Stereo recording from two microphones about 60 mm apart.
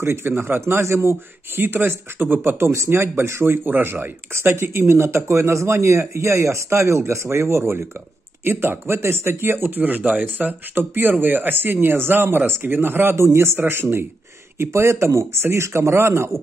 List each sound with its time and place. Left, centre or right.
0.0 s speech: right
1.6 s speech: right
8.5 s speech: right
13.1 s speech: right
13.6 s speech: right
14.6 s speech: right